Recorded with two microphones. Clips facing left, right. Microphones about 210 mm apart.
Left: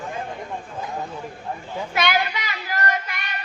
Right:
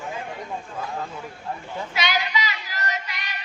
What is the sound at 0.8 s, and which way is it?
Speech, 20° left (ahead or behind).